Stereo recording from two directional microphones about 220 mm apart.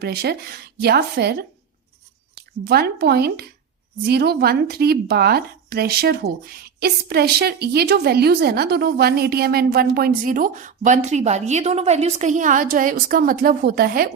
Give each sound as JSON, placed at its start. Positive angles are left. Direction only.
{"t": 0.0, "sound": "speech", "side_deg": -45}
{"t": 2.6, "sound": "speech", "side_deg": -45}